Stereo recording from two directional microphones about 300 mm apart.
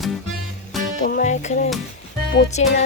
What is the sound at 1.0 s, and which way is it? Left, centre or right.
Speech, left.